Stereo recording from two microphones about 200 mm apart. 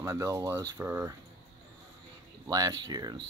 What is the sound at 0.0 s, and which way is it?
Speech, 15° right (ahead or behind).